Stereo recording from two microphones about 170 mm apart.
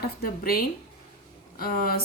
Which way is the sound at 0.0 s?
60° left (ahead or behind).